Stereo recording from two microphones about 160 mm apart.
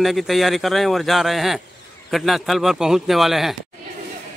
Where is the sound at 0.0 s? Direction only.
Centre (ahead or behind).